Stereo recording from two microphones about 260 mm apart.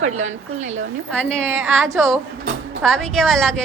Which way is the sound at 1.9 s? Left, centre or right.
Centre.